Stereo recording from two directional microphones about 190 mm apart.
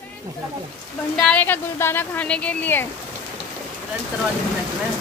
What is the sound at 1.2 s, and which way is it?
Speech, 10° left (ahead or behind).